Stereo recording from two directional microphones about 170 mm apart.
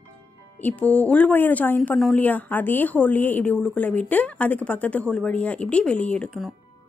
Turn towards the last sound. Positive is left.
turn(degrees=5)  # may be behind; listen again after turning